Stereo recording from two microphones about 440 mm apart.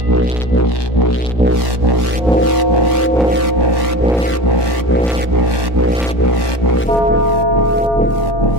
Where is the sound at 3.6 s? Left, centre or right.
Right.